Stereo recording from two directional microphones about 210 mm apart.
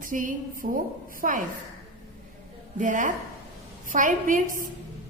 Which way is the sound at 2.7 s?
40° right (ahead or behind).